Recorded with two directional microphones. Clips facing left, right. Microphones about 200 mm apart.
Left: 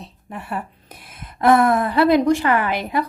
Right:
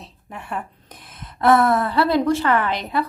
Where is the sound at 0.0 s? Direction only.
Centre (ahead or behind).